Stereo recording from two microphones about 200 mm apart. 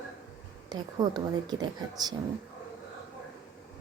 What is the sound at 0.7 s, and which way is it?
A woman's voice, 20° right (ahead or behind).